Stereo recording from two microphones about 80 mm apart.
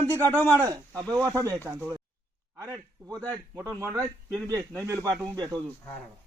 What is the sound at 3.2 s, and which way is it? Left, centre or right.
A man's voice, right.